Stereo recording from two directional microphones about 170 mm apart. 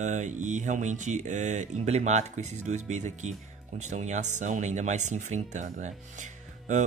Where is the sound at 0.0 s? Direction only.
45° right (ahead or behind).